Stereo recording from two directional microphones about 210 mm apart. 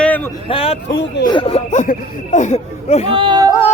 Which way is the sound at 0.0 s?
10° left (ahead or behind).